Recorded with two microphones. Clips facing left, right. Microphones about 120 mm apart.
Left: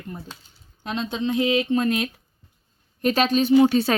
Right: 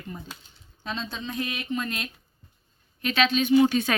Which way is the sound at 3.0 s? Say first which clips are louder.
Left 4 dB; 40° left (ahead or behind).